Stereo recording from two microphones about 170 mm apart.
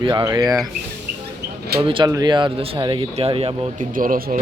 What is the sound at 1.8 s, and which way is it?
Speech, 30° right (ahead or behind).